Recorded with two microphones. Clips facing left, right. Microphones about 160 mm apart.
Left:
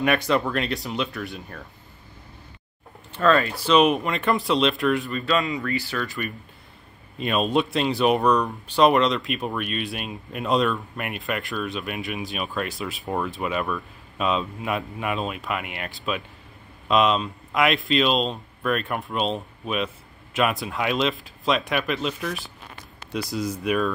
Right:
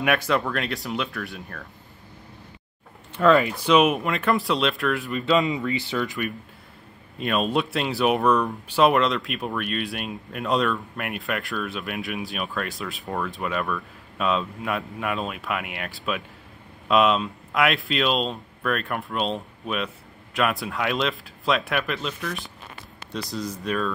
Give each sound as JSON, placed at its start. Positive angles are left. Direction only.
{"t": 0.0, "sound": "speech", "side_deg": -5}
{"t": 3.1, "sound": "speech", "side_deg": -10}
{"t": 5.1, "sound": "speech", "side_deg": -20}
{"t": 7.2, "sound": "speech", "side_deg": 0}
{"t": 13.0, "sound": "speech", "side_deg": 15}